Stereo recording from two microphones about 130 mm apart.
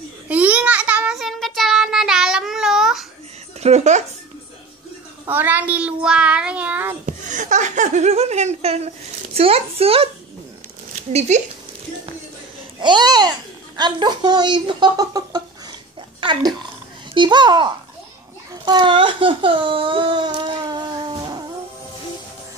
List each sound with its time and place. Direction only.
0.3 s child singing: 10° right (ahead or behind)
3.6 s speech: 60° right (ahead or behind)
5.3 s child singing: 15° right (ahead or behind)
7.1 s speech: 75° right (ahead or behind); by 10.0 s 50° right (ahead or behind)
10.9 s speech: 60° right (ahead or behind)
12.8 s a child's voice: 35° right (ahead or behind)
18.7 s speech: 40° right (ahead or behind)